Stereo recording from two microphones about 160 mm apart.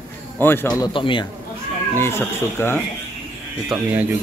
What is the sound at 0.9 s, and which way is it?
Speech, 30° left (ahead or behind).